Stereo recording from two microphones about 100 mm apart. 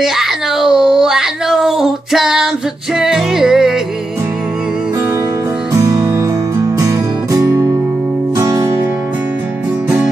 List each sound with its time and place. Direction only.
0.0 s speech: 5° right (ahead or behind)
5.7 s music: 35° right (ahead or behind)